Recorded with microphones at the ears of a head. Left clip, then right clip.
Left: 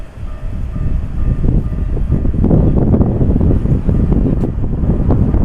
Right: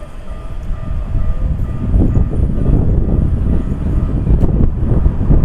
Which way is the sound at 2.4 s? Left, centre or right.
Left.